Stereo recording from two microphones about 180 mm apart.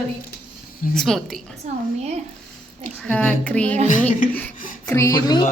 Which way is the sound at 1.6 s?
40° right (ahead or behind).